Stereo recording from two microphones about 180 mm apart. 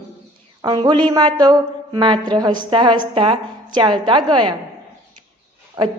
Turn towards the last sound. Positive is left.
turn(degrees=-25)  # may be behind; listen again after turning